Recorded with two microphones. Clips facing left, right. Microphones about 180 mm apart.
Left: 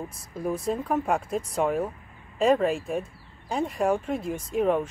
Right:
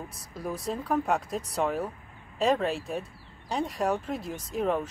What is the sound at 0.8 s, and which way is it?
Speech, 10° left (ahead or behind).